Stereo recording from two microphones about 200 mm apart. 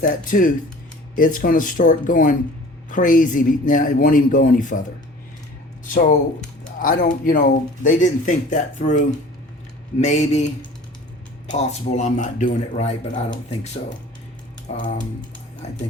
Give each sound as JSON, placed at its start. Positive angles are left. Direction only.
{"t": 0.0, "sound": "a man's voice", "side_deg": 45}
{"t": 5.9, "sound": "speech", "side_deg": 40}
{"t": 11.6, "sound": "speech", "side_deg": 35}